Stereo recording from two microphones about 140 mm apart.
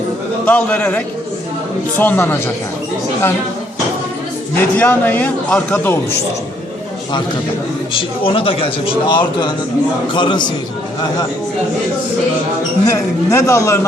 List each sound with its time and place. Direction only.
0.4 s a man's voice: 10° left (ahead or behind)
4.5 s a man's voice: 10° left (ahead or behind)
8.3 s a man's voice: 40° left (ahead or behind)
12.8 s a man's voice: 20° left (ahead or behind)